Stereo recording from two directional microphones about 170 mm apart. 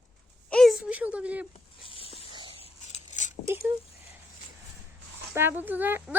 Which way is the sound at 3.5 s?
15° right (ahead or behind).